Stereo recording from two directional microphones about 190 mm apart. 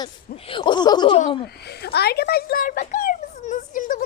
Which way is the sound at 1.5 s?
60° left (ahead or behind).